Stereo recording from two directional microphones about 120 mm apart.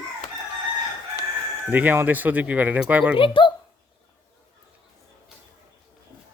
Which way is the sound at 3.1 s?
45° left (ahead or behind).